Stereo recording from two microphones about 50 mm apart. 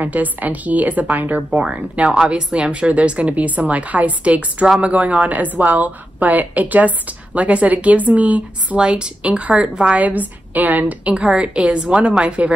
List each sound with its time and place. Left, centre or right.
0.0 s a woman's voice: right
8.7 s a woman's voice: right